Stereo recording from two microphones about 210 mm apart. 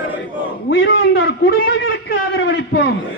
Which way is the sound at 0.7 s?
50° left (ahead or behind).